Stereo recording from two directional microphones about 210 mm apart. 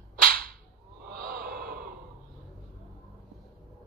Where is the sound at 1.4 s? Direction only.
45° right (ahead or behind).